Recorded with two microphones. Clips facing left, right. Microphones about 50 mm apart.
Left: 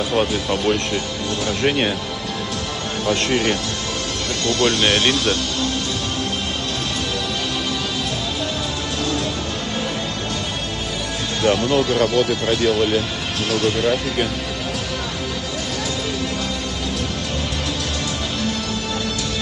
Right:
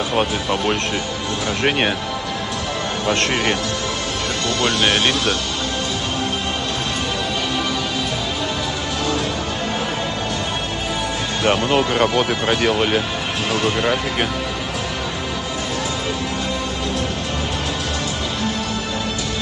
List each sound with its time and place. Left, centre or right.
0.2 s speech: right
3.1 s speech: right
4.6 s speech: right
4.8 s speech: centre
11.4 s speech: right